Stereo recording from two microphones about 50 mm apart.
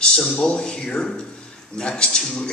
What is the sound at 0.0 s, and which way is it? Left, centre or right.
A man's voice, centre.